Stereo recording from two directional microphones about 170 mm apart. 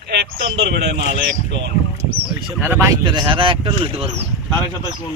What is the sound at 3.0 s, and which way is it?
Speech, 30° right (ahead or behind).